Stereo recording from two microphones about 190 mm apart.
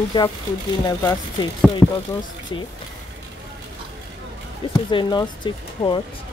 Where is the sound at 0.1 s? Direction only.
25° left (ahead or behind); by 2.0 s 10° left (ahead or behind).